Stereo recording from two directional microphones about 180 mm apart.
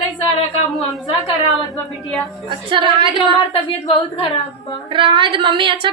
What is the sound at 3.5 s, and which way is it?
Speech, 30° left (ahead or behind).